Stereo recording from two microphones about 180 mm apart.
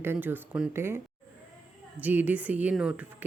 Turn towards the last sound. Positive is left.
turn(degrees=-5)  # may be behind; listen again after turning